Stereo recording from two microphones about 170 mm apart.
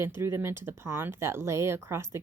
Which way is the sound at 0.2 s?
15° right (ahead or behind).